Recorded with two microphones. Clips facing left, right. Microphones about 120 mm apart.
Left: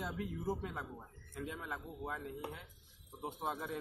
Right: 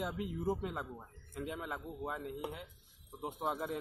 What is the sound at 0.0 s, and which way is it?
A man's voice, 10° right (ahead or behind).